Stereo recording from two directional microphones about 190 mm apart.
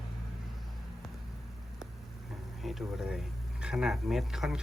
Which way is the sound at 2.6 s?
Centre (ahead or behind).